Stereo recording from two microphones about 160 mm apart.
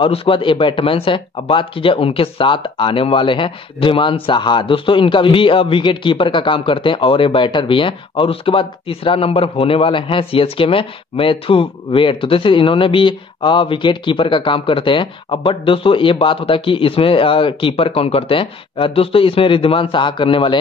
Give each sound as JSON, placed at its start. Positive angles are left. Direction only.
{"t": 0.0, "sound": "speech", "side_deg": 35}